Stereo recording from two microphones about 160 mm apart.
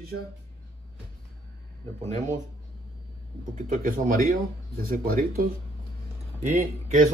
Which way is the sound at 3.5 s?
60° right (ahead or behind).